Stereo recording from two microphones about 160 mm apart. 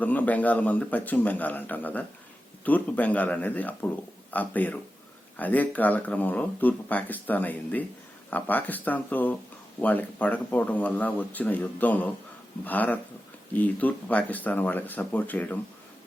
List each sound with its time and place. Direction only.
0.0 s speech: 10° left (ahead or behind)